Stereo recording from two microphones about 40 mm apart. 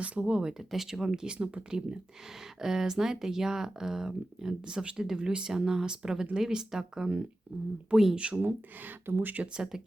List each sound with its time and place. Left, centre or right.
0.0 s speech: right
0.7 s speech: centre
1.4 s speech: right; by 8.1 s centre
8.1 s speech: right
8.4 s speech: right